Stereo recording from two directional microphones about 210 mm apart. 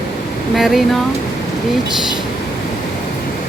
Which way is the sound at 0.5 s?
Centre (ahead or behind).